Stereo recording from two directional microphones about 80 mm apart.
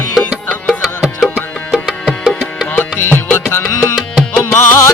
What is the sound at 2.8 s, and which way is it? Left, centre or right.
Music, left.